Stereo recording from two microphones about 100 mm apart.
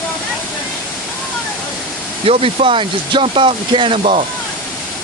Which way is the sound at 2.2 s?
75° right (ahead or behind).